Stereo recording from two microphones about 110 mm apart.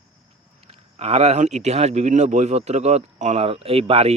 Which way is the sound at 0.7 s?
65° right (ahead or behind).